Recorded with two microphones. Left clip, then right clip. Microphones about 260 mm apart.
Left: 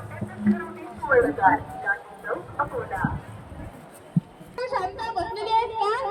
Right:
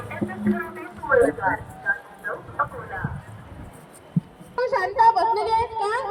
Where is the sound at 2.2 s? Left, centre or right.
Left.